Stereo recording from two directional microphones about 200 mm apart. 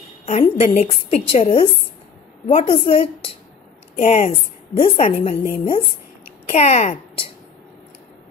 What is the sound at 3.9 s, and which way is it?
A woman's voice, 35° left (ahead or behind).